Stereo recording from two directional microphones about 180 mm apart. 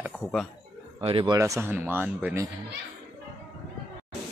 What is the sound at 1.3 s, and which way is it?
Speech, 15° right (ahead or behind).